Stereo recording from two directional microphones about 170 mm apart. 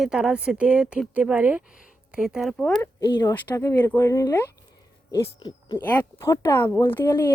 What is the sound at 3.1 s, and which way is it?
Speech, 25° left (ahead or behind).